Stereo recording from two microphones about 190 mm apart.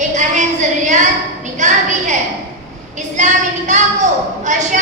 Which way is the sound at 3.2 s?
40° right (ahead or behind).